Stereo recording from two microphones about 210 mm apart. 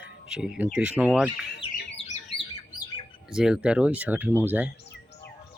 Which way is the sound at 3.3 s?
5° right (ahead or behind).